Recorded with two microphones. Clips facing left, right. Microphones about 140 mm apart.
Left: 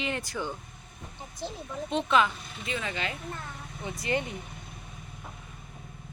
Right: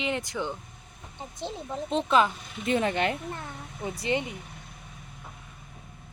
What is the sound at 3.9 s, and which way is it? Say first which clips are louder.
Speech: right 3 dB; 30° right (ahead or behind).